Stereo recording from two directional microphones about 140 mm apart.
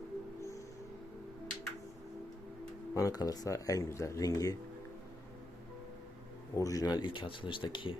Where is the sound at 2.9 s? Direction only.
25° left (ahead or behind).